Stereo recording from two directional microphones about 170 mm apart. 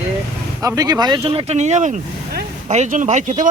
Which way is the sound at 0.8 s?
25° right (ahead or behind).